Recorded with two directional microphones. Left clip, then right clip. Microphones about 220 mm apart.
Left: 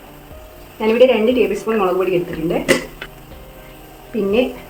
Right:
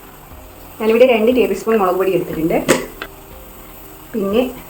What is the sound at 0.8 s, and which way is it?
Speech, centre (ahead or behind).